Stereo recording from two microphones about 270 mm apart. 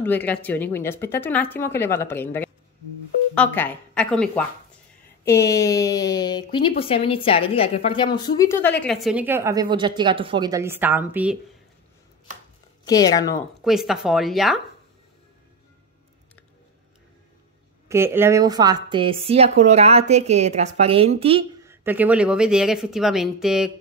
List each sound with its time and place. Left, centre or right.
0.0 s a woman's voice: centre
12.8 s speech: centre
13.7 s a woman's voice: centre
17.8 s a woman's voice: centre
21.6 s a woman's voice: centre